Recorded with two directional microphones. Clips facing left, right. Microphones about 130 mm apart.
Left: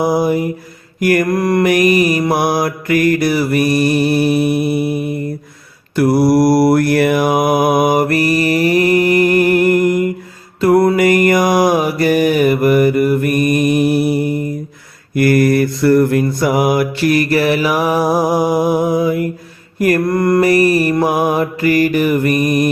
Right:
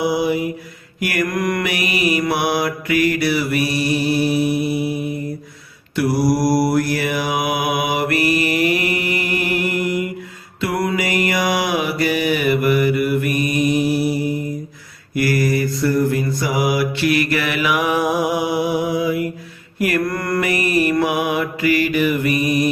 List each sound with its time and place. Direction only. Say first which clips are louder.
0.0 s mantra: left 4 dB; 45° left (ahead or behind)
1.6 s mantra: left 9 dB; 45° left (ahead or behind)
20.1 s mantra: left 8 dB; 25° left (ahead or behind)
20.4 s mantra: left 4 dB; 40° left (ahead or behind)